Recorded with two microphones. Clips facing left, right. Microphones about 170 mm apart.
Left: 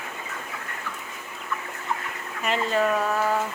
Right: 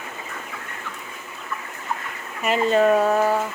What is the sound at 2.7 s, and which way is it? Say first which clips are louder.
Speech: right 7 dB; 30° right (ahead or behind).